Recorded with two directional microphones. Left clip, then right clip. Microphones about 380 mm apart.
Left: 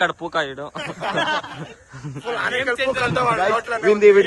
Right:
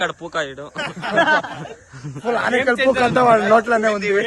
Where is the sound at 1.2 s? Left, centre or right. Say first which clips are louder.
Right 8 dB; right.